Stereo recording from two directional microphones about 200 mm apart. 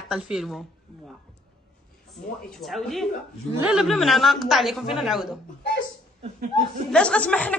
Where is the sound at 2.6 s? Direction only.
Centre (ahead or behind).